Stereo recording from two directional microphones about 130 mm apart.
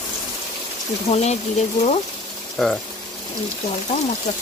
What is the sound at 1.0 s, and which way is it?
Speech, 55° left (ahead or behind).